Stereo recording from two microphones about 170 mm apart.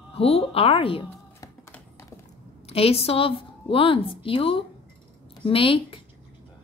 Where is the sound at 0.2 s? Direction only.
35° left (ahead or behind).